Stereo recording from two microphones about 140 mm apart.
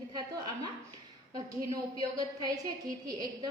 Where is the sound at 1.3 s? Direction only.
25° right (ahead or behind).